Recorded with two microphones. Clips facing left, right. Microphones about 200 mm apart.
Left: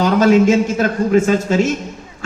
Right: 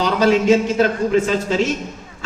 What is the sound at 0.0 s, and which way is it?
Speech, 45° left (ahead or behind).